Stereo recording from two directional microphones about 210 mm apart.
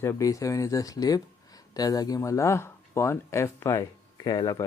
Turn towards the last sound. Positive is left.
turn(degrees=20)  # may be behind; listen again after turning